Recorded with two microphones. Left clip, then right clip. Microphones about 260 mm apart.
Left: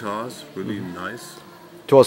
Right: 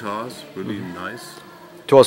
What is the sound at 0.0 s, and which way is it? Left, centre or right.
Speech, centre.